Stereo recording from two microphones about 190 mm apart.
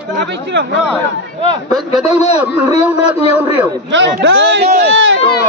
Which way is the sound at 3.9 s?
75° right (ahead or behind).